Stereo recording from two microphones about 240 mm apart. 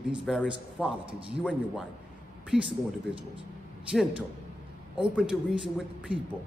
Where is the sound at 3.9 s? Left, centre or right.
Centre.